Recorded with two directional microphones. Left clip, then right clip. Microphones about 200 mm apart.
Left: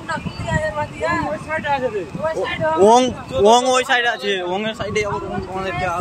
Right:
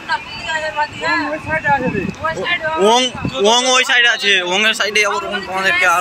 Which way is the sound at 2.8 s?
40° left (ahead or behind).